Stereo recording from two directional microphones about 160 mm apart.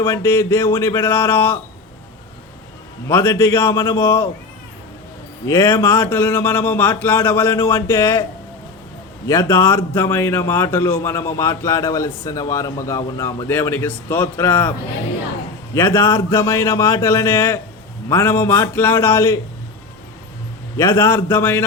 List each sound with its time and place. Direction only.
0.1 s a man's voice: 15° left (ahead or behind)
3.1 s a man's voice: 15° left (ahead or behind)
5.5 s a man's voice: 15° left (ahead or behind)
9.2 s a man's voice: 20° left (ahead or behind)
15.7 s a man's voice: 15° left (ahead or behind)
20.7 s a man's voice: 15° left (ahead or behind)